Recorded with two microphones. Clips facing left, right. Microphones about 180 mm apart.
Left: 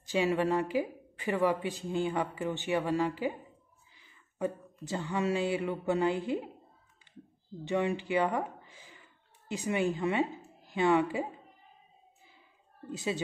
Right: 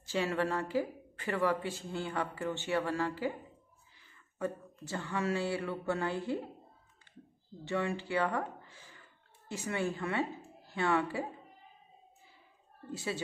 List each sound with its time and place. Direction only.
0.0 s speech: 15° left (ahead or behind)
7.6 s a woman's voice: 20° left (ahead or behind)
12.9 s speech: 15° left (ahead or behind)